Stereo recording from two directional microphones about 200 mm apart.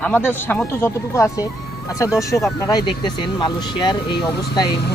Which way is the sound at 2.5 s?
20° left (ahead or behind).